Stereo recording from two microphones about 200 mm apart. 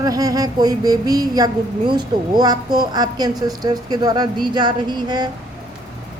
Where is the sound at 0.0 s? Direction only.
20° right (ahead or behind).